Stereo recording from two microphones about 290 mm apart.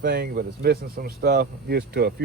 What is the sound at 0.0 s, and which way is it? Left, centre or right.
Speech, right.